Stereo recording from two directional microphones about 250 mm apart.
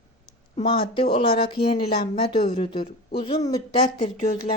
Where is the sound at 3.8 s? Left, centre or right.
Left.